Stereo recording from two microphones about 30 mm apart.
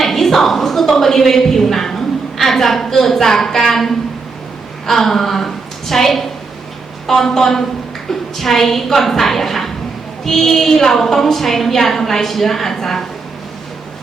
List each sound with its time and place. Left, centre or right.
0.0 s a woman's voice: centre